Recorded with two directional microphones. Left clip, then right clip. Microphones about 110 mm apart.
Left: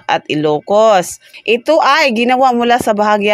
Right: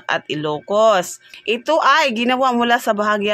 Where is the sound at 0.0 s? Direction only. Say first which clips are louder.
Left 7 dB; 45° left (ahead or behind).